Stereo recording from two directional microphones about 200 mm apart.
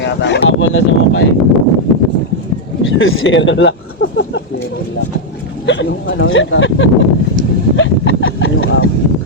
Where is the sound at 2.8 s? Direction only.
75° left (ahead or behind).